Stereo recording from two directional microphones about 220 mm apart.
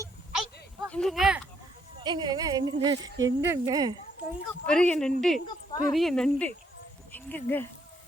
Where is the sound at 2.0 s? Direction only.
20° right (ahead or behind).